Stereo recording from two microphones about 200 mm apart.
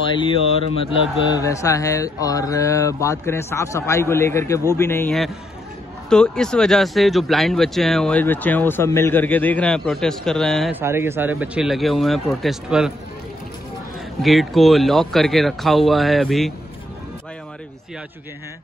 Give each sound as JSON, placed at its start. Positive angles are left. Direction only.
{"t": 0.2, "sound": "speech", "side_deg": 25}
{"t": 1.4, "sound": "speech", "side_deg": 15}
{"t": 10.7, "sound": "speech", "side_deg": -10}
{"t": 14.2, "sound": "speech", "side_deg": 0}